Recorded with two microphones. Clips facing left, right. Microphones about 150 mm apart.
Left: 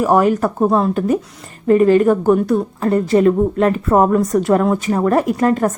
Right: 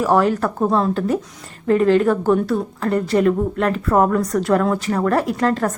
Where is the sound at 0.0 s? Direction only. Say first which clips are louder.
Left 3 dB; 15° left (ahead or behind).